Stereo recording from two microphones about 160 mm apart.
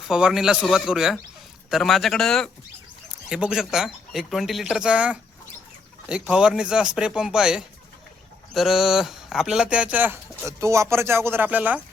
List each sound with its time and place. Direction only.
0.1 s speech: 5° right (ahead or behind)